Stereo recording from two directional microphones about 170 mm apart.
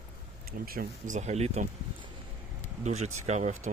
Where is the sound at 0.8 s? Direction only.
50° right (ahead or behind).